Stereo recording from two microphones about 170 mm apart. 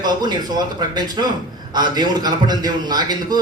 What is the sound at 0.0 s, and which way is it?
A man's voice, 25° right (ahead or behind).